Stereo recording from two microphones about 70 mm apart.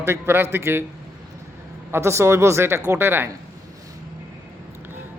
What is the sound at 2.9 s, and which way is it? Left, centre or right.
Speech, right.